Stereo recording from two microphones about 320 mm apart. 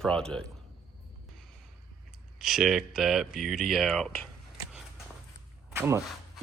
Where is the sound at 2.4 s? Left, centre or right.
Centre.